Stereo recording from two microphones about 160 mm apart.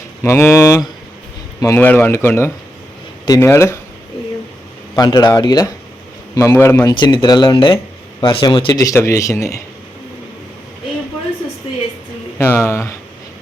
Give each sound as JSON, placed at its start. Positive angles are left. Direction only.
{"t": 0.2, "sound": "speech", "side_deg": 15}
{"t": 4.9, "sound": "speech", "side_deg": 25}
{"t": 6.9, "sound": "speech", "side_deg": 30}
{"t": 12.4, "sound": "speech", "side_deg": 15}